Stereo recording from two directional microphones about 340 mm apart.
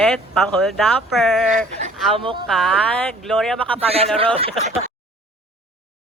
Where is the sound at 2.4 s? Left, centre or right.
Centre.